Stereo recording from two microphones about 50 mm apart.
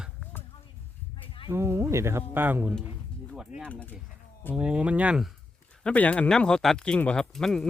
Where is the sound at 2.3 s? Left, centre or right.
Right.